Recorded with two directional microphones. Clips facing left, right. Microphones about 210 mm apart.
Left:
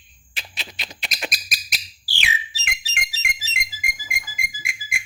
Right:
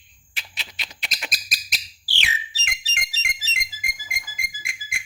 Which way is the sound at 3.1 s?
10° left (ahead or behind).